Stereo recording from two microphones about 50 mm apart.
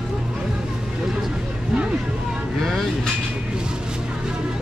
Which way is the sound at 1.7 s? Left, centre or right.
Centre.